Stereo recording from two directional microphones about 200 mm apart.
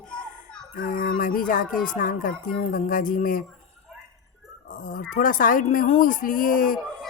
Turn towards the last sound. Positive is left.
turn(degrees=45)  # may be behind; listen again after turning